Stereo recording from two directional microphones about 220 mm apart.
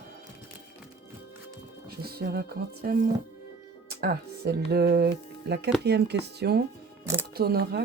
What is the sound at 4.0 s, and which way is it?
Speech, 45° right (ahead or behind).